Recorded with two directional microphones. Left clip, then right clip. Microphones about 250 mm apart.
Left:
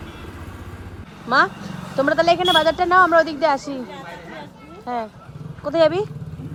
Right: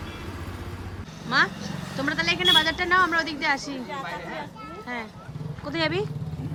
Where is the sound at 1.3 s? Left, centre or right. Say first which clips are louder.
Left 5 dB; centre.